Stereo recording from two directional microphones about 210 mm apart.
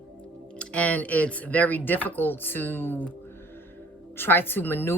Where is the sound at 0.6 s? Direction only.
5° left (ahead or behind).